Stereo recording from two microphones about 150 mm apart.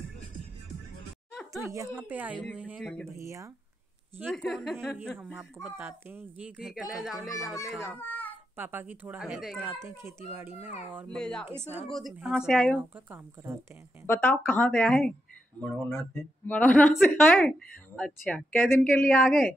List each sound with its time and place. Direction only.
1.3 s a sound: 5° left (ahead or behind)
1.7 s speech: 15° right (ahead or behind)
2.8 s speech: 5° left (ahead or behind)
3.1 s speech: 20° right (ahead or behind)
4.3 s speech: 5° left (ahead or behind)
5.3 s speech: 10° right (ahead or behind)
7.9 s a sound: 10° left (ahead or behind)
8.5 s speech: 15° right (ahead or behind)
10.0 s speech: 15° right (ahead or behind)
11.1 s speech: 5° left (ahead or behind)
11.6 s speech: 15° right (ahead or behind)
11.9 s speech: centre (ahead or behind)
12.7 s speech: 15° right (ahead or behind)
14.0 s a woman's voice: 15° left (ahead or behind)